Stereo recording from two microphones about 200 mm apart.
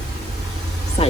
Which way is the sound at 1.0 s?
30° left (ahead or behind).